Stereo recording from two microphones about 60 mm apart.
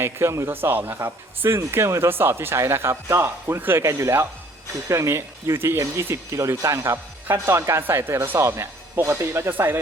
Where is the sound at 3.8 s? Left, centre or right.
Right.